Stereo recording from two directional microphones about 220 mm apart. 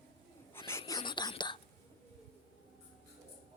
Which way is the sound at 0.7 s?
15° left (ahead or behind).